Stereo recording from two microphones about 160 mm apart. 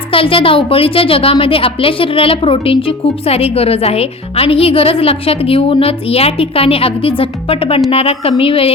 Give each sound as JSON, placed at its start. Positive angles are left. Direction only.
{"t": 0.1, "sound": "a woman's voice", "side_deg": 35}